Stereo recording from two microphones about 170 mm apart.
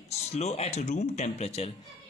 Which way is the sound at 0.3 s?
40° left (ahead or behind).